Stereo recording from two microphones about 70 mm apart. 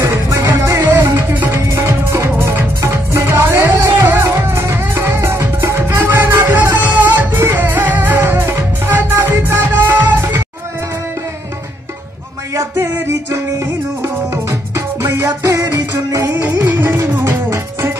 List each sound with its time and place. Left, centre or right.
0.0 s music: right
1.1 s music: right
1.6 s music: right
12.5 s music: right
15.5 s music: right
16.3 s music: right